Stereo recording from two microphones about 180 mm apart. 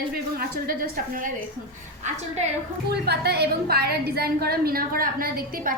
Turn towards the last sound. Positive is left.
turn(degrees=-50)  # may be behind; listen again after turning